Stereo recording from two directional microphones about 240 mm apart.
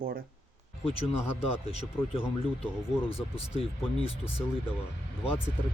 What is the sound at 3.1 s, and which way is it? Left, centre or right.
Speech, left.